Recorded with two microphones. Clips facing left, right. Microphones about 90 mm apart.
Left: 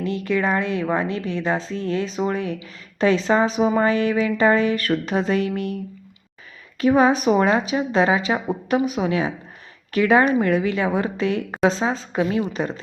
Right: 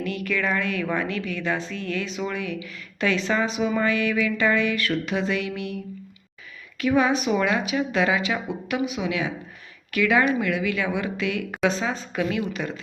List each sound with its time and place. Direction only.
0.0 s a woman's voice: 30° left (ahead or behind)
6.7 s a woman's voice: 35° left (ahead or behind)